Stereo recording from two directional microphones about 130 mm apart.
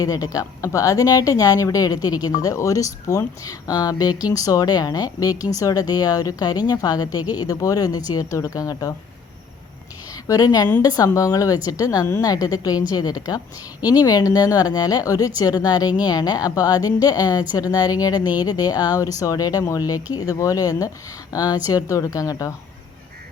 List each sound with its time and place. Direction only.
0.0 s a woman's voice: 30° left (ahead or behind)
10.2 s a woman's voice: 30° left (ahead or behind)